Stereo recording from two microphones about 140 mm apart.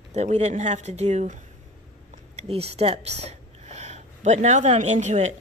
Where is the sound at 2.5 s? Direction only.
45° right (ahead or behind).